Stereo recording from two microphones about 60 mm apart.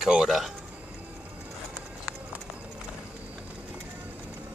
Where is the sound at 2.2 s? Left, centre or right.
Right.